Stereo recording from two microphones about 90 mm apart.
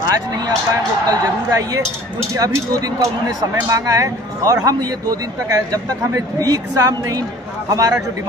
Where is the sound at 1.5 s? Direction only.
45° right (ahead or behind).